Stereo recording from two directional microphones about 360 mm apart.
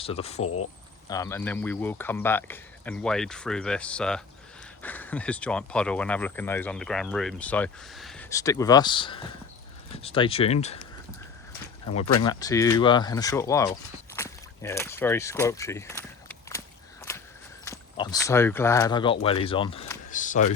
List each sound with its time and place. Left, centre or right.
0.0 s speech: centre
0.4 s speech: left
1.0 s speech: centre
12.2 s speech: centre
14.1 s a sound: centre
17.7 s speech: centre